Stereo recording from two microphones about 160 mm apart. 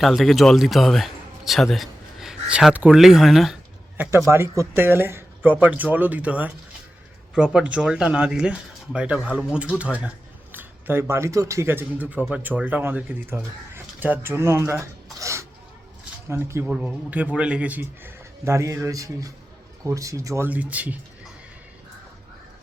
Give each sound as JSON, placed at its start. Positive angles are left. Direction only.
{"t": 0.0, "sound": "speech", "side_deg": 0}
{"t": 3.9, "sound": "speech", "side_deg": -10}